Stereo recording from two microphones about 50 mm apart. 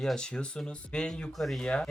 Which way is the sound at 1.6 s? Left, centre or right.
Left.